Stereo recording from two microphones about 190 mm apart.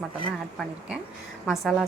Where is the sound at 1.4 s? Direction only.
Centre (ahead or behind).